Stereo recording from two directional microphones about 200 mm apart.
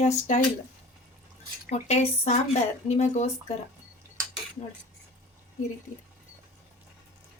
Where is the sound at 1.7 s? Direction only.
30° left (ahead or behind).